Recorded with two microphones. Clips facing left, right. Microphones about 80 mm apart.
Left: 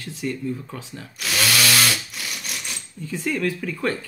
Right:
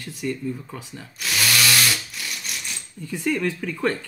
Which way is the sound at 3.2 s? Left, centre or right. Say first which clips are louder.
Right 1 dB; centre.